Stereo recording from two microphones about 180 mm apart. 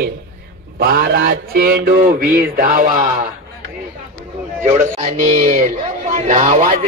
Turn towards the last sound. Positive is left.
turn(degrees=-45)  # may be behind; listen again after turning